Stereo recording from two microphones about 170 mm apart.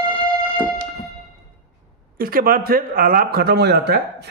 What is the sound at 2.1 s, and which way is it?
Speech, 60° right (ahead or behind).